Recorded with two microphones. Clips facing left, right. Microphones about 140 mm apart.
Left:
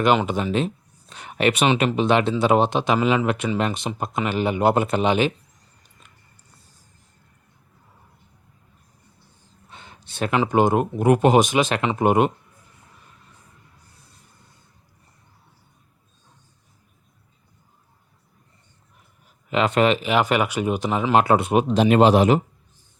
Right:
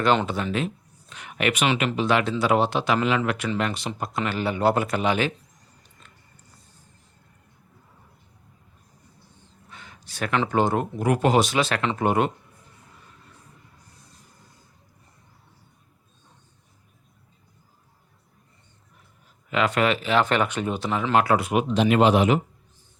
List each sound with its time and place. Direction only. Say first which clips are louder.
0.3 s speech: left 4 dB; 20° left (ahead or behind)
9.6 s a sound: left 2 dB; 25° left (ahead or behind)
10.3 s speech: left 4 dB; 15° left (ahead or behind)
19.5 s speech: left 3 dB; 25° left (ahead or behind)